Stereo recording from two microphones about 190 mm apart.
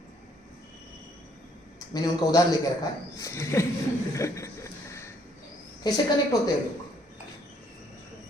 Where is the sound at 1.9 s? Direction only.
20° left (ahead or behind).